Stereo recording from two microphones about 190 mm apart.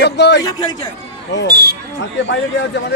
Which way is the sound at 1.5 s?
55° right (ahead or behind).